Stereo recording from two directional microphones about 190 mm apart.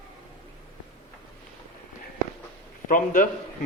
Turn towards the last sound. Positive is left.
turn(degrees=45)  # may be behind; listen again after turning